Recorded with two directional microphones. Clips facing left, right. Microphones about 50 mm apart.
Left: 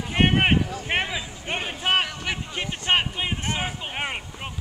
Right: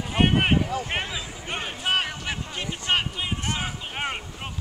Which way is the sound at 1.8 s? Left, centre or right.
Left.